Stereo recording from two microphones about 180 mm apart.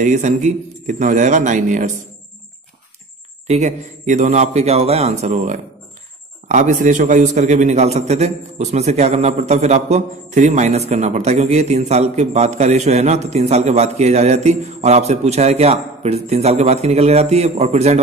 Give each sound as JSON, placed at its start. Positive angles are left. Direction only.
{"t": 0.0, "sound": "speech", "side_deg": -45}
{"t": 3.4, "sound": "a man's voice", "side_deg": -40}